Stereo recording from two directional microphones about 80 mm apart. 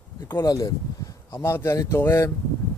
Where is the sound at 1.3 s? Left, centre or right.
Left.